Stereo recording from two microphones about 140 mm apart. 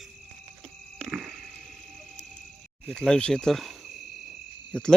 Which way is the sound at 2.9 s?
5° left (ahead or behind).